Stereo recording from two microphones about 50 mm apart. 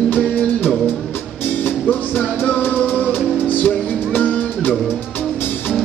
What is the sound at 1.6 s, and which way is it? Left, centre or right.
Music, left.